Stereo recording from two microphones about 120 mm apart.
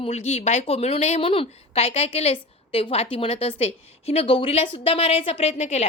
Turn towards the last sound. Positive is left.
turn(degrees=65)  # may be behind; listen again after turning